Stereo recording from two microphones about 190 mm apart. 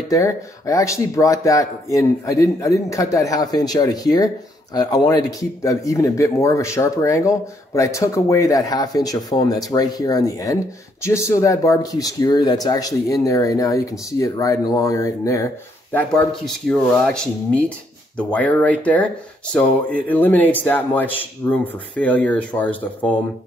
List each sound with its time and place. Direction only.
0.1 s speech: 15° left (ahead or behind)